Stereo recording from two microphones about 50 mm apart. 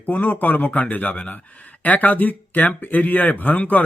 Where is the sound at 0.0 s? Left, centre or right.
Left.